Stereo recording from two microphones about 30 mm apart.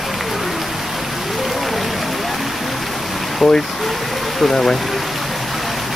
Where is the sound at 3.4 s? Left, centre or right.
Centre.